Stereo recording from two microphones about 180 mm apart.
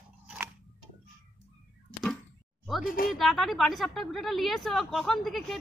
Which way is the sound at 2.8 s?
50° left (ahead or behind).